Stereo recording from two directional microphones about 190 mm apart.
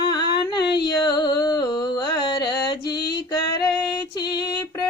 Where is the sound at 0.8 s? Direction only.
20° left (ahead or behind).